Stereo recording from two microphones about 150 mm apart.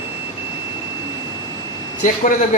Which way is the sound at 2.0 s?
60° left (ahead or behind).